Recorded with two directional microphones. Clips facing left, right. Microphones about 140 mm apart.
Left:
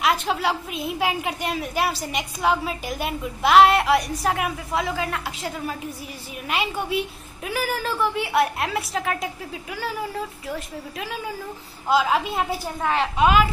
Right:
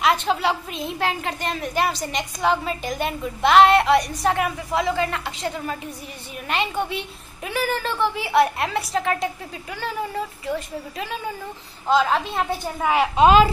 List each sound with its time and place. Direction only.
0.0 s a woman's voice: centre (ahead or behind)
12.8 s a woman's voice: 10° right (ahead or behind)
13.1 s a woman's voice: 25° right (ahead or behind)